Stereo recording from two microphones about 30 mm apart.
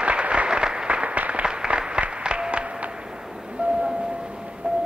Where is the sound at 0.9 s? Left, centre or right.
Right.